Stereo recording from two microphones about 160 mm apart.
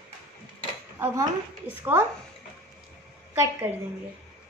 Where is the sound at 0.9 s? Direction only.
15° right (ahead or behind).